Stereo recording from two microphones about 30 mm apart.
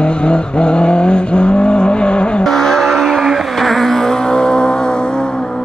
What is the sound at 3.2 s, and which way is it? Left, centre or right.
Vehicle, centre.